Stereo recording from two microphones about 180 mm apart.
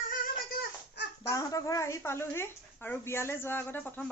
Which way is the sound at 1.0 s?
70° left (ahead or behind).